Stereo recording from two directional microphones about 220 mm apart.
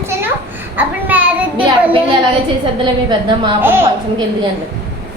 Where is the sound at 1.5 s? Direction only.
20° right (ahead or behind).